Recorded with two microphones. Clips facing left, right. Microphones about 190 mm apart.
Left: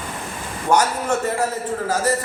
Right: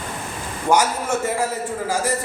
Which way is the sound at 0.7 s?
10° right (ahead or behind).